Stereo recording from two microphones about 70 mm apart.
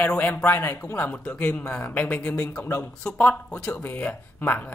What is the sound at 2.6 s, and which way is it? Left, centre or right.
Speech, left.